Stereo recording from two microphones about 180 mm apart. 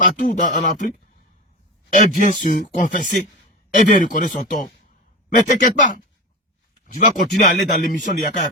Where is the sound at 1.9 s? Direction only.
45° left (ahead or behind).